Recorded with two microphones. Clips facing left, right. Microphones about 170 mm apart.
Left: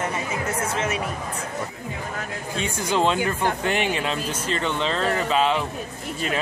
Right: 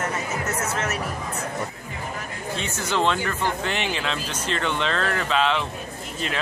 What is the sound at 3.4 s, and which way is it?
Speech, 50° left (ahead or behind).